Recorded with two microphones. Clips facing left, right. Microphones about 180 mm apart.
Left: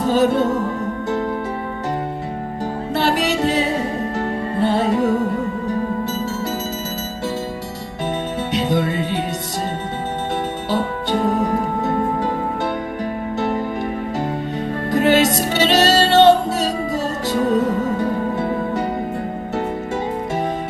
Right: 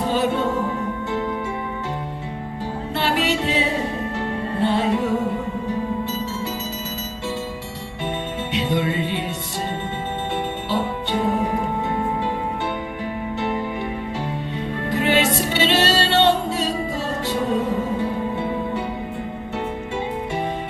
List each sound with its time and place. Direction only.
0.1 s music: 40° left (ahead or behind)
2.9 s music: 40° left (ahead or behind)
8.5 s music: 40° left (ahead or behind)
10.7 s music: 40° left (ahead or behind)
13.4 s music: 40° left (ahead or behind)
14.8 s music: 40° left (ahead or behind)